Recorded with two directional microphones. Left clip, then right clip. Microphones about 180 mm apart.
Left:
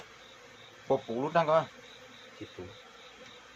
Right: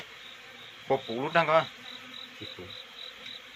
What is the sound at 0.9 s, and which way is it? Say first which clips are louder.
Speech: right 1 dB; 10° right (ahead or behind).